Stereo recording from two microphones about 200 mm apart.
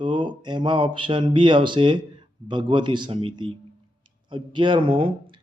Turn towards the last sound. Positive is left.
turn(degrees=-25)  # may be behind; listen again after turning